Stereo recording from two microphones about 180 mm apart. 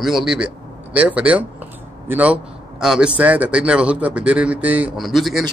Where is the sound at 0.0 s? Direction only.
Centre (ahead or behind).